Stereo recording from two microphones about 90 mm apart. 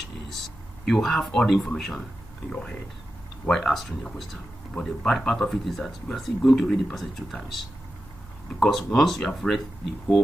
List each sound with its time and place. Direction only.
0.8 s speech: 5° left (ahead or behind)
3.4 s speech: 5° left (ahead or behind)